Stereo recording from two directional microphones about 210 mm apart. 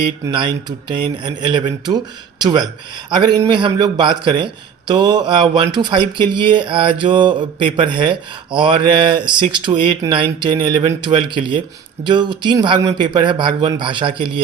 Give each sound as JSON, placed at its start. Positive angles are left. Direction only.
{"t": 0.3, "sound": "speech", "side_deg": -20}